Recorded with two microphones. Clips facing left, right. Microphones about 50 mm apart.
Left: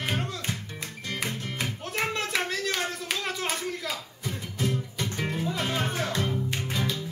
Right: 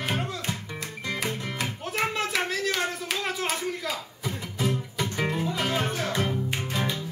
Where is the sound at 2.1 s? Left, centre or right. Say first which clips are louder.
Right 1 dB; centre.